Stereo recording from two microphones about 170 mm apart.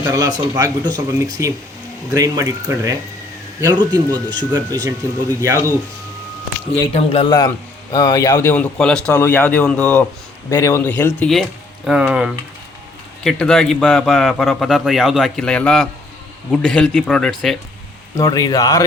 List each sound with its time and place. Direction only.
0.0 s speech: 20° right (ahead or behind)
6.9 s a man's voice: 35° left (ahead or behind)
7.3 s a man's voice: 20° left (ahead or behind); by 17.6 s 5° left (ahead or behind)
18.2 s speech: 20° left (ahead or behind)